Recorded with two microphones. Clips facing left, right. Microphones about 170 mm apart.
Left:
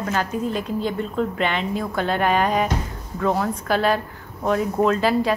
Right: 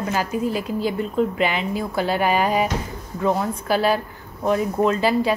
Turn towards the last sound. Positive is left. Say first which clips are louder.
# even
turn(degrees=0)  # may be behind; listen again after turning